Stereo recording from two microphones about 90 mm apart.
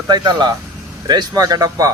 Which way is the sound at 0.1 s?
50° right (ahead or behind).